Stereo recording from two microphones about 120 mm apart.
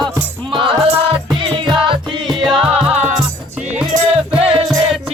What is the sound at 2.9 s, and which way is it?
Music, 65° right (ahead or behind).